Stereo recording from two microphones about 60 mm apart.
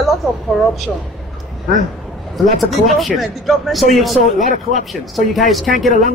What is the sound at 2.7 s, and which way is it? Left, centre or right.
A man's voice, centre.